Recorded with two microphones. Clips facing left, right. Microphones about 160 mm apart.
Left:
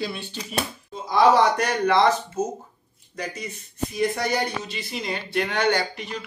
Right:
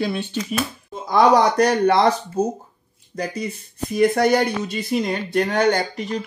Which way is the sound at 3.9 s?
55° right (ahead or behind).